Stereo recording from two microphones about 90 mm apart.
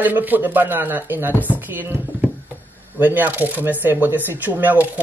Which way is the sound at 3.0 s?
20° right (ahead or behind).